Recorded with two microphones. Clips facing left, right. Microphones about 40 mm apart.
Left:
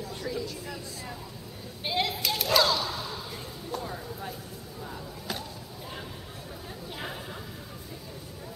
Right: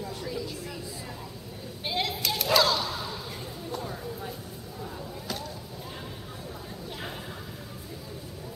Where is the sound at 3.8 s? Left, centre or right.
Centre.